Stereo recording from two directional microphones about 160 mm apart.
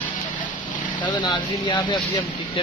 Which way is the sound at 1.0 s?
30° left (ahead or behind).